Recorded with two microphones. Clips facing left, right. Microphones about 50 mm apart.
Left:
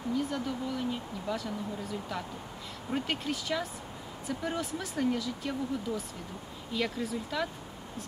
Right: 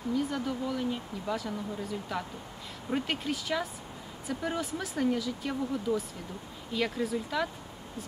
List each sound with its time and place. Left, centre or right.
0.1 s speech: centre